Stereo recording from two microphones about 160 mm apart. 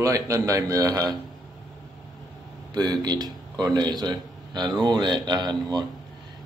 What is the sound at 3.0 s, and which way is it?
Speech, 25° right (ahead or behind).